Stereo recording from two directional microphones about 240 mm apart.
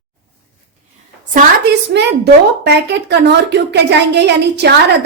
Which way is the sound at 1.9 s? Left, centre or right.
Right.